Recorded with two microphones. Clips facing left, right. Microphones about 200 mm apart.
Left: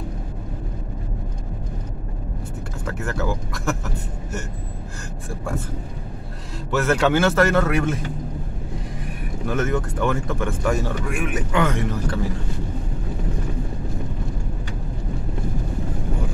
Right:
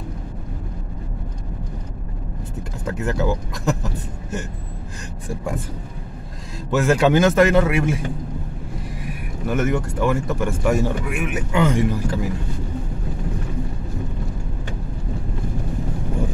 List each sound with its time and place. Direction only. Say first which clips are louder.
2.9 s speech: right 4 dB; 15° right (ahead or behind)
6.7 s speech: right 3 dB; 15° right (ahead or behind)